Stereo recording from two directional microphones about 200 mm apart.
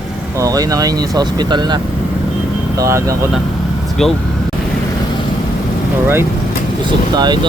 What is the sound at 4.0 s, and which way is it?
Speech, centre (ahead or behind).